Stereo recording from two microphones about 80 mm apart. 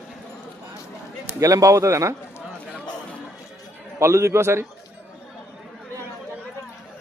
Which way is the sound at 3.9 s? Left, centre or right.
Right.